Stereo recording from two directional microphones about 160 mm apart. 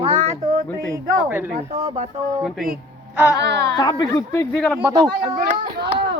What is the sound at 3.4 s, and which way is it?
Speech, 90° right.